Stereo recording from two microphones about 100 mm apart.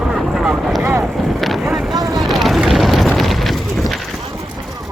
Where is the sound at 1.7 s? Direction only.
Centre (ahead or behind).